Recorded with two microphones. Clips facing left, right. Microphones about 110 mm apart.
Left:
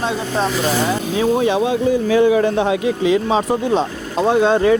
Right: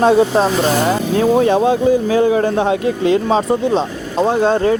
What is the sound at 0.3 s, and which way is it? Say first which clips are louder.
Speech: right 4 dB; 35° right (ahead or behind).